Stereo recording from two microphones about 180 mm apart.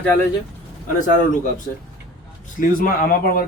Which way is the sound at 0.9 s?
45° left (ahead or behind).